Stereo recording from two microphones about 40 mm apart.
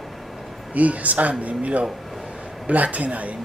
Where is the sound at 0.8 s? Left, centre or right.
Right.